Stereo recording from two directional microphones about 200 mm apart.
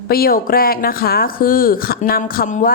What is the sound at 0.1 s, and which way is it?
Speech, 50° left (ahead or behind).